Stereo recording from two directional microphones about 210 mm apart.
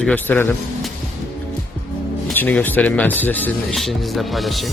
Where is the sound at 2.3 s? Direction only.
10° left (ahead or behind).